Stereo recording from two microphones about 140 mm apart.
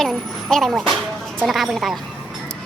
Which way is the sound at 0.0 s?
Centre (ahead or behind).